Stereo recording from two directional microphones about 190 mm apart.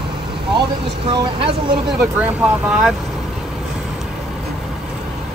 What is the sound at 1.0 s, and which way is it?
Speech, 25° right (ahead or behind).